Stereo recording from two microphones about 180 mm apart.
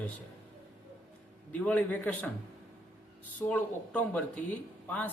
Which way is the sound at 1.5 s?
10° left (ahead or behind).